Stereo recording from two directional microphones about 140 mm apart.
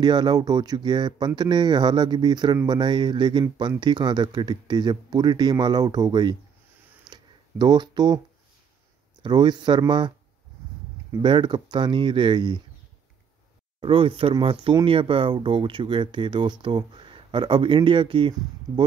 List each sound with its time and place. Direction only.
0.0 s speech: 30° right (ahead or behind)
7.1 s a sound: 30° right (ahead or behind)
9.2 s speech: 30° right (ahead or behind)
11.1 s speech: 35° right (ahead or behind)
13.7 s speech: 40° right (ahead or behind)